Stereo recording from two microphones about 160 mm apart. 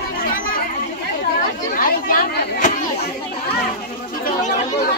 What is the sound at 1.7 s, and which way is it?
Speech, 60° left (ahead or behind).